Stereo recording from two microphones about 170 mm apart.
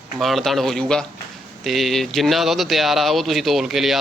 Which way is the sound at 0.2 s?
Centre (ahead or behind).